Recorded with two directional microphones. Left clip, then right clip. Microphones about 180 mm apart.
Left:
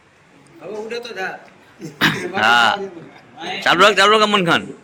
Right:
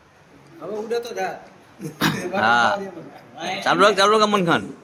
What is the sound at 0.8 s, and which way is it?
Speech, 55° right (ahead or behind).